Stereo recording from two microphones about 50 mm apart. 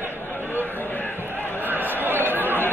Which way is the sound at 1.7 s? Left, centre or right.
Right.